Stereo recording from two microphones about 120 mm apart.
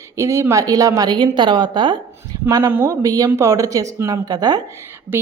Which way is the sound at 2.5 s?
25° right (ahead or behind).